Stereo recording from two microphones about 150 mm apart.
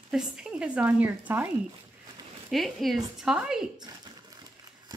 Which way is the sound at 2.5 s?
Centre (ahead or behind).